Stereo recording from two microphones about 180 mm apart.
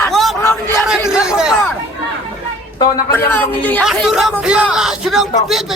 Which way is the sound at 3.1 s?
10° left (ahead or behind).